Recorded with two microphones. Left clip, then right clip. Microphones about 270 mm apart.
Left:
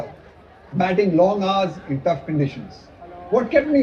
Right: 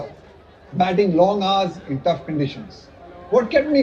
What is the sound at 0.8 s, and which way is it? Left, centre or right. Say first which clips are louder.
Speech: right 1 dB; right.